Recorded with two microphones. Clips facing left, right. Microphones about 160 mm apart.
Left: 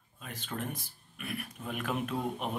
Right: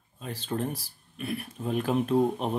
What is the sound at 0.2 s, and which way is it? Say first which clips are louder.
Speech: right 7 dB; 30° right (ahead or behind).